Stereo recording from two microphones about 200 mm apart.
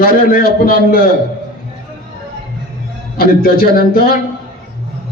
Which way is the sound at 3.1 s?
50° left (ahead or behind).